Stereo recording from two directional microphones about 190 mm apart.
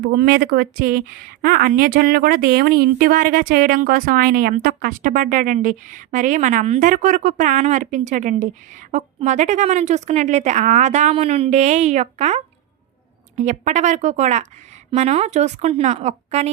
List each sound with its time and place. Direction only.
0.1 s a woman's voice: 50° right (ahead or behind); by 16.5 s 35° right (ahead or behind)